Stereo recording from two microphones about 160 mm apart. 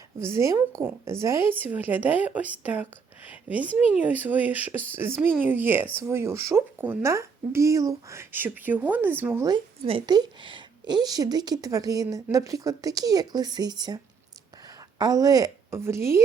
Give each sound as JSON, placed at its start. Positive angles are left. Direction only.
{"t": 0.2, "sound": "a woman's voice", "side_deg": -15}
{"t": 9.5, "sound": "a woman's voice", "side_deg": -30}